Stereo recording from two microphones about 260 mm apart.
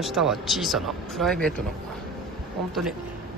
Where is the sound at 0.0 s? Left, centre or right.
Centre.